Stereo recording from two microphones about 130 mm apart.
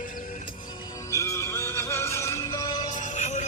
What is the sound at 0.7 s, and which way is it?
Music, 35° left (ahead or behind).